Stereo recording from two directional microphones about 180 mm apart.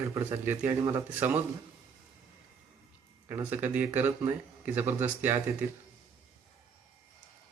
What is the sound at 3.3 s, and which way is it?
Speech, 10° right (ahead or behind).